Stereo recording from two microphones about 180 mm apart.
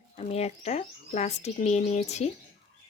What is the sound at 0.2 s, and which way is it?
Speech, 35° left (ahead or behind).